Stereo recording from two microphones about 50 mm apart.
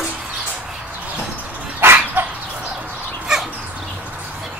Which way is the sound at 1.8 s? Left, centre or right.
Right.